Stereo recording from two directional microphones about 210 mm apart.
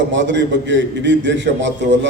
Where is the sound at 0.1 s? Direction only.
60° right (ahead or behind).